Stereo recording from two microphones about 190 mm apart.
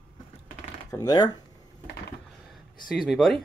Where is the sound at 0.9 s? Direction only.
20° left (ahead or behind).